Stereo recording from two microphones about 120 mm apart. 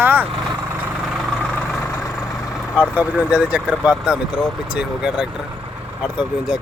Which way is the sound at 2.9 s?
10° right (ahead or behind).